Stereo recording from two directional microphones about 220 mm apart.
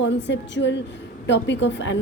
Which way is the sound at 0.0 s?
55° left (ahead or behind).